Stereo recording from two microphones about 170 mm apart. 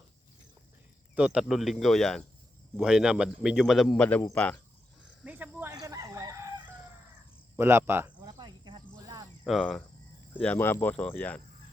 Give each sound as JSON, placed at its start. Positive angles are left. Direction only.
{"t": 1.1, "sound": "speech", "side_deg": -5}
{"t": 5.2, "sound": "cricket", "side_deg": -10}
{"t": 5.7, "sound": "chicken", "side_deg": -20}
{"t": 7.5, "sound": "cricket", "side_deg": -15}
{"t": 9.5, "sound": "speech", "side_deg": 0}